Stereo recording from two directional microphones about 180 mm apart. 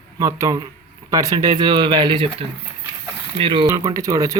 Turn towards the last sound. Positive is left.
turn(degrees=-20)  # may be behind; listen again after turning